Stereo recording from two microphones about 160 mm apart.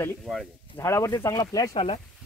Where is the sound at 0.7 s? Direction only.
20° left (ahead or behind).